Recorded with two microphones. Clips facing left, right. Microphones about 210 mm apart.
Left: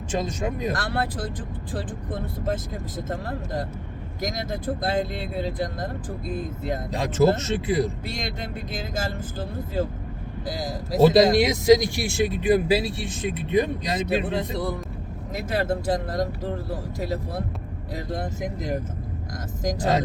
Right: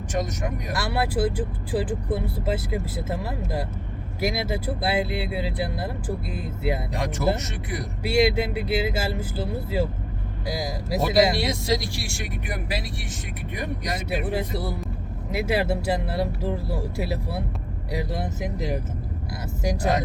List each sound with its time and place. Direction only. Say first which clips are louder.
0.1 s speech: left 1 dB; 25° left (ahead or behind)
0.8 s speech: right 4 dB; 10° right (ahead or behind)
6.9 s speech: left 9 dB; 25° left (ahead or behind)
8.0 s speech: right 11 dB; 10° right (ahead or behind)
10.4 s speech: right 1 dB; 10° right (ahead or behind)
11.0 s speech: left 5 dB; 20° left (ahead or behind)
14.3 s speech: left 1 dB; 5° right (ahead or behind)